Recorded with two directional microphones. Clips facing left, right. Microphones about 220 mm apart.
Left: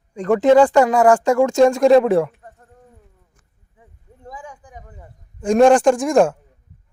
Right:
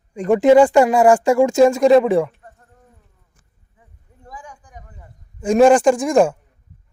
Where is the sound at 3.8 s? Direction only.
25° left (ahead or behind).